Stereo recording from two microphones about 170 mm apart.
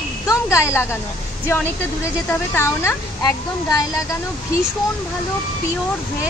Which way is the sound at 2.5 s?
15° left (ahead or behind).